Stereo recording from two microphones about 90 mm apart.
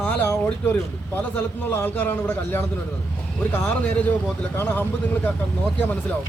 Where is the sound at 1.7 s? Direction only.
20° left (ahead or behind).